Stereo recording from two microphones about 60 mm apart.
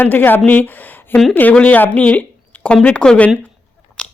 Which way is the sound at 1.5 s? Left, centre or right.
Left.